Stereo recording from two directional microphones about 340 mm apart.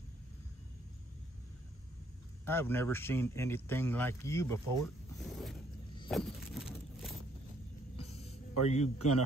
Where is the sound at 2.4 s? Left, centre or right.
Centre.